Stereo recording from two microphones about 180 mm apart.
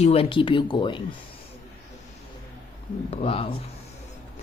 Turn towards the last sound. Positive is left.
turn(degrees=30)  # may be behind; listen again after turning